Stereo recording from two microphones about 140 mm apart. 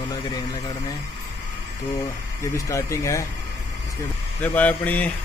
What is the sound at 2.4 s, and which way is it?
Speech, 20° left (ahead or behind).